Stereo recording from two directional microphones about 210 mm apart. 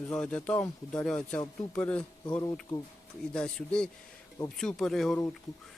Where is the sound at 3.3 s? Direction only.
5° left (ahead or behind).